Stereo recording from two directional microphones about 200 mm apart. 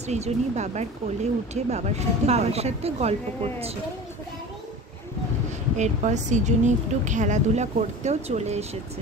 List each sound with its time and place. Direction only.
0.0 s speech: 35° right (ahead or behind)
5.8 s speech: 35° right (ahead or behind)